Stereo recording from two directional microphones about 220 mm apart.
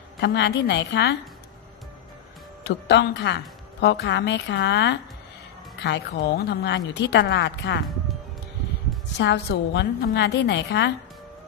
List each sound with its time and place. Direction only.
0.2 s a woman's voice: 50° left (ahead or behind)
2.6 s a woman's voice: 50° left (ahead or behind)
9.2 s a woman's voice: 50° left (ahead or behind)